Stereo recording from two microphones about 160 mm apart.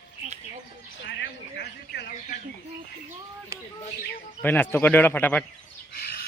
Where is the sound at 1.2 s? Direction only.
90° left.